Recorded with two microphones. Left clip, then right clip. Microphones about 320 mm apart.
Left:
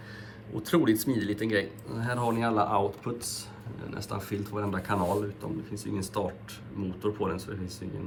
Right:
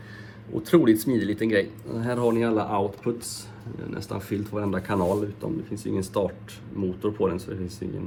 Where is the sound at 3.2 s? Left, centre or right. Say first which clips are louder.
Even; left.